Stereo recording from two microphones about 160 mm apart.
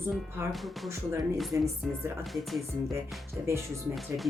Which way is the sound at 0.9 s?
20° right (ahead or behind).